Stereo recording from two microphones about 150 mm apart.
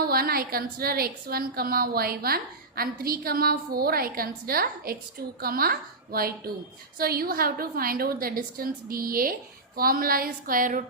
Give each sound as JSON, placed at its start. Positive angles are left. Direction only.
{"t": 0.0, "sound": "a woman's voice", "side_deg": -85}